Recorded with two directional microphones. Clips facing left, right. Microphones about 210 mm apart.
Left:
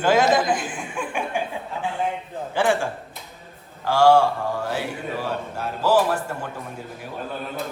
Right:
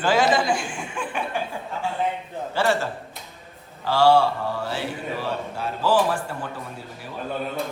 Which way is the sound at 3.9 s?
10° left (ahead or behind).